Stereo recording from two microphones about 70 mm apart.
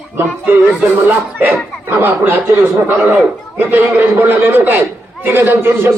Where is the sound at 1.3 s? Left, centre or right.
Right.